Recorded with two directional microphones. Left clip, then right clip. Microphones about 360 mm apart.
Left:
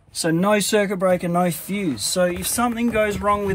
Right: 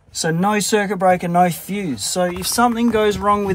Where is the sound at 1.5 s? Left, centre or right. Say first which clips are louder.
Even; centre.